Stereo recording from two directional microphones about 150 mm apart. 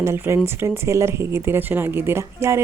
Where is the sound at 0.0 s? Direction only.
15° right (ahead or behind).